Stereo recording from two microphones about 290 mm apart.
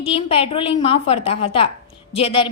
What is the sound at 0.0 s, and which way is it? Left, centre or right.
A woman's voice, centre.